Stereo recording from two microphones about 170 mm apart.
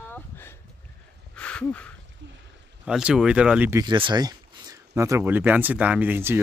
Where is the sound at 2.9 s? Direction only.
5° right (ahead or behind).